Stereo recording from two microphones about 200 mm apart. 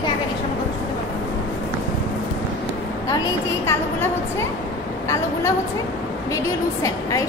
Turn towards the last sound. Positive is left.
turn(degrees=15)  # may be behind; listen again after turning